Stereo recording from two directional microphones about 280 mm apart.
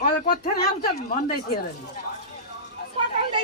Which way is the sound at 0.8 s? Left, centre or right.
Left.